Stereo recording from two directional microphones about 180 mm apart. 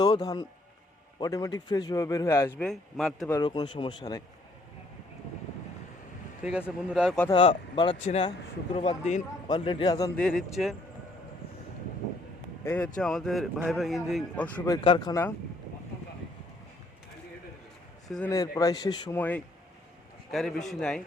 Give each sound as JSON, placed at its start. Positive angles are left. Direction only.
{"t": 0.0, "sound": "a man's voice", "side_deg": 20}
{"t": 3.4, "sound": "a man's voice", "side_deg": 25}
{"t": 6.4, "sound": "a man's voice", "side_deg": -5}
{"t": 7.3, "sound": "a man's voice", "side_deg": 25}
{"t": 10.2, "sound": "a man's voice", "side_deg": 5}
{"t": 12.6, "sound": "a man's voice", "side_deg": 10}
{"t": 14.7, "sound": "a man's voice", "side_deg": 25}
{"t": 18.3, "sound": "a man's voice", "side_deg": 20}
{"t": 19.1, "sound": "a man's voice", "side_deg": 10}
{"t": 20.7, "sound": "a man's voice", "side_deg": 5}